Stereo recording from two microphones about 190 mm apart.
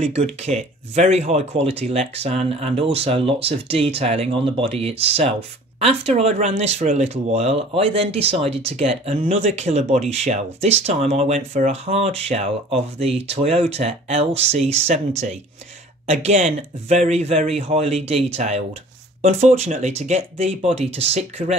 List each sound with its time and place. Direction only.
0.0 s speech: 35° right (ahead or behind)